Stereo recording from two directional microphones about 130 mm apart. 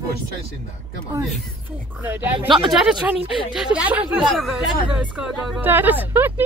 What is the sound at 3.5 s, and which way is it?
Speech, 5° right (ahead or behind).